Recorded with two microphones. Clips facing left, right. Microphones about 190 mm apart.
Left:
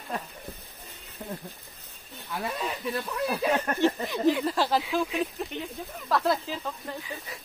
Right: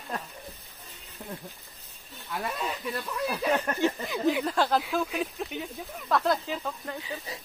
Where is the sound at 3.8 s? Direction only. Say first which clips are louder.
Left 4 dB; centre (ahead or behind).